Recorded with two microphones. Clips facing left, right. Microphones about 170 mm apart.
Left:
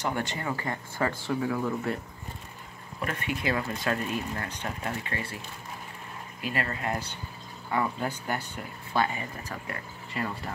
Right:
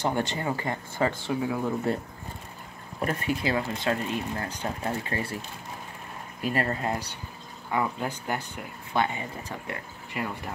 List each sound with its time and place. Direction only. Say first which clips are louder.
0.0 s speech: right 3 dB; 30° right (ahead or behind)
3.0 s speech: right 4 dB; 35° right (ahead or behind)
3.5 s speech: right 2 dB; 25° right (ahead or behind)
6.4 s speech: right 4 dB; 35° right (ahead or behind)
7.7 s speech: right 1 dB; 15° right (ahead or behind)